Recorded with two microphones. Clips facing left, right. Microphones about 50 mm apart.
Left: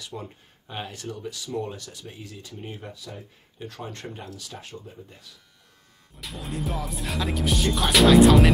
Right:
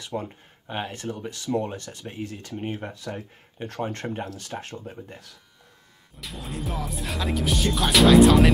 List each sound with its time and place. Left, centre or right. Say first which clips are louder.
0.0 s speech: right 6 dB; right
6.1 s music: left 1 dB; centre